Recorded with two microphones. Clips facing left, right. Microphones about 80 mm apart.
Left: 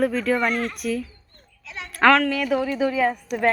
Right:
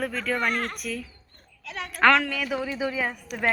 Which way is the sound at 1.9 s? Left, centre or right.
Centre.